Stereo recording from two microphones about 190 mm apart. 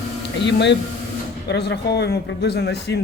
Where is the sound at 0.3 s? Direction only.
65° left (ahead or behind).